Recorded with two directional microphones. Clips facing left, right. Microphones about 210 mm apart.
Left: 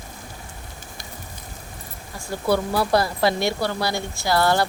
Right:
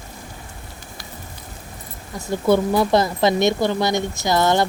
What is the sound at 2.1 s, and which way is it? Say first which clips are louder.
Speech: right 5 dB; 20° right (ahead or behind).